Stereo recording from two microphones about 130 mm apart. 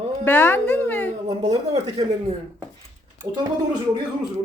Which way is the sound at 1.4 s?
30° right (ahead or behind).